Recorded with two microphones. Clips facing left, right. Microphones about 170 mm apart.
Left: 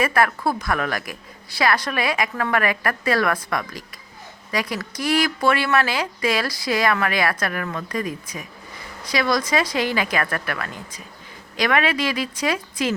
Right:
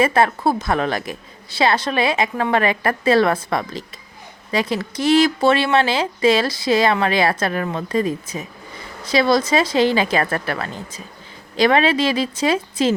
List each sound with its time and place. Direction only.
0.0 s speech: 25° right (ahead or behind)